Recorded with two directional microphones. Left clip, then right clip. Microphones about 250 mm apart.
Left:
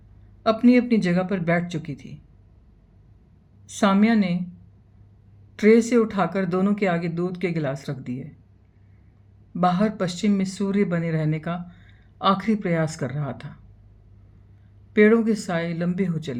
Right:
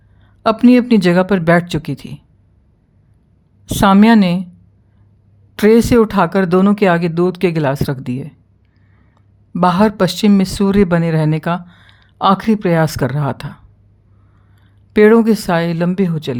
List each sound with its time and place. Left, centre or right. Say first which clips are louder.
0.4 s speech: right 7 dB; right
3.7 s speech: right 10 dB; right
5.5 s speech: right 7 dB; right
9.6 s speech: right 10 dB; right
14.9 s speech: right 9 dB; right